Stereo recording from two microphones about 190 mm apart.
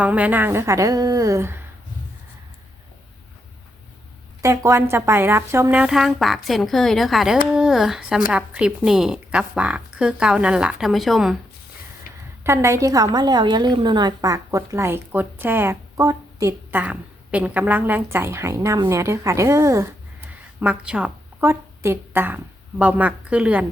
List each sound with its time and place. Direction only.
0.0 s a woman's voice: 5° right (ahead or behind)
4.4 s a woman's voice: 15° right (ahead or behind)
12.1 s a sound: 50° left (ahead or behind)
12.4 s a woman's voice: 15° right (ahead or behind)